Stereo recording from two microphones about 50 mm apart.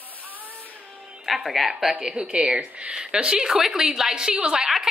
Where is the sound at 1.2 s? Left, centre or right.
Centre.